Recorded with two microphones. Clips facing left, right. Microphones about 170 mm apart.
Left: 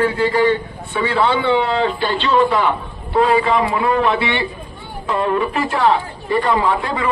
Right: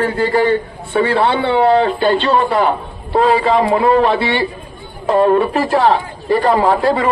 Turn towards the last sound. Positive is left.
turn(degrees=-35)  # may be behind; listen again after turning